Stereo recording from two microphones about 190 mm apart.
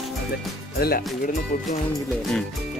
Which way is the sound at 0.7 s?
50° left (ahead or behind).